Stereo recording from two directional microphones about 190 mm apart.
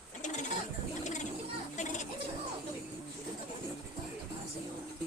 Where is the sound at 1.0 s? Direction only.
40° left (ahead or behind).